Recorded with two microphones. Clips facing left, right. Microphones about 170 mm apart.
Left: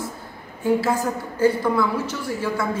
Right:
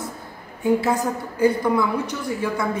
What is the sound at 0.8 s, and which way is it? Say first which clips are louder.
A woman's voice: right 1 dB; 15° right (ahead or behind).